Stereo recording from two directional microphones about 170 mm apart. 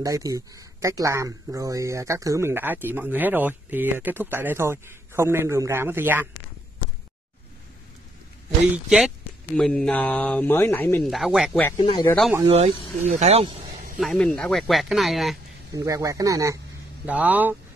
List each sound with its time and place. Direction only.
0.0 s speech: 20° right (ahead or behind)
8.7 s speech: centre (ahead or behind)
11.1 s speech: centre (ahead or behind)
11.8 s speech: 30° left (ahead or behind)
12.4 s speech: 40° right (ahead or behind)
13.9 s speech: centre (ahead or behind)
15.7 s speech: 20° right (ahead or behind)
17.0 s speech: 10° right (ahead or behind)